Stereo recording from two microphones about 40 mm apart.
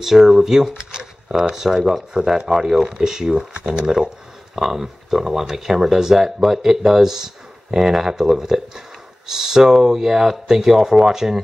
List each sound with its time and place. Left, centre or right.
0.0 s speech: centre
1.6 s speech: centre